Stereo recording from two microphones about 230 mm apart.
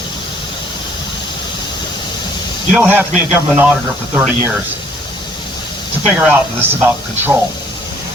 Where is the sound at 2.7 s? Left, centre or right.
Centre.